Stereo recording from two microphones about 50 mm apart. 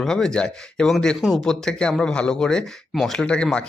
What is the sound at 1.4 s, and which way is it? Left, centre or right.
Speech, centre.